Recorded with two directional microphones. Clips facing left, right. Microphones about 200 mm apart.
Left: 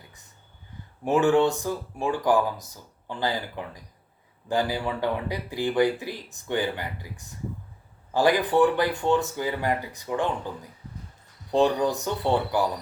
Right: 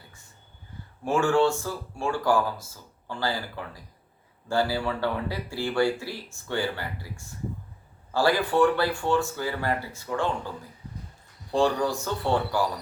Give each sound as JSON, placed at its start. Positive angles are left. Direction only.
{"t": 1.0, "sound": "speech", "side_deg": 20}
{"t": 11.5, "sound": "speech", "side_deg": 20}